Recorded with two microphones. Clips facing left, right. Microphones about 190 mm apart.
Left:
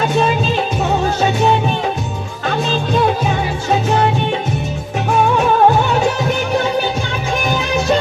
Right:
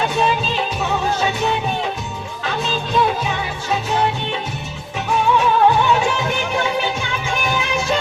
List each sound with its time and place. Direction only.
0.1 s music: 45° left (ahead or behind)
2.9 s music: 50° left (ahead or behind)
5.4 s music: 45° left (ahead or behind)